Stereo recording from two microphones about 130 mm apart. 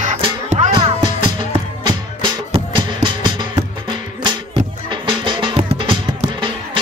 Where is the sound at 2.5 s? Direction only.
40° right (ahead or behind).